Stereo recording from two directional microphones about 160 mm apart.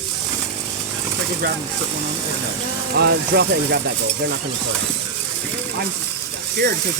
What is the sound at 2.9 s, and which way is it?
Speech, 90° right.